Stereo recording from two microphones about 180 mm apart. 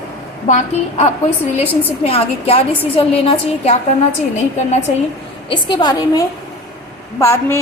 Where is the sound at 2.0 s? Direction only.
35° left (ahead or behind).